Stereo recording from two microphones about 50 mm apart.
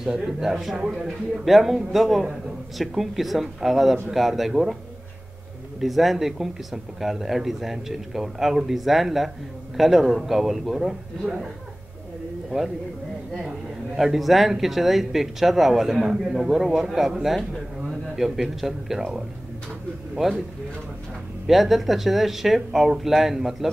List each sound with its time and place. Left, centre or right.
0.0 s speech: centre
0.7 s speech: centre
1.0 s speech: centre
5.8 s speech: centre
12.4 s speech: centre
21.5 s speech: centre